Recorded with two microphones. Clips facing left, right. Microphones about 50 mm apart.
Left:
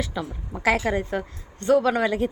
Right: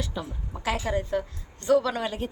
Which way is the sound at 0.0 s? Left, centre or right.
Left.